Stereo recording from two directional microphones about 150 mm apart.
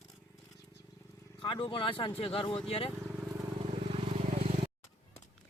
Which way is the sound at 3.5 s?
45° right (ahead or behind).